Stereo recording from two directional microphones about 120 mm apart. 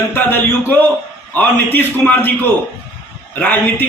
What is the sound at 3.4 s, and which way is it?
Speech, 15° left (ahead or behind).